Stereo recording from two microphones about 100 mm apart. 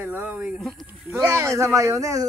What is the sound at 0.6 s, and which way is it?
Speech, centre (ahead or behind).